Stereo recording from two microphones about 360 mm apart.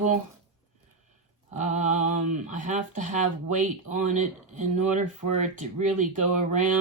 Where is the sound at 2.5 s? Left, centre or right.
Right.